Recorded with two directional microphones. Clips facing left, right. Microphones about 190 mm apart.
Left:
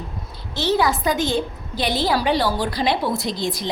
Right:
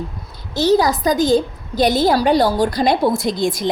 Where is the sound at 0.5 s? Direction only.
40° right (ahead or behind).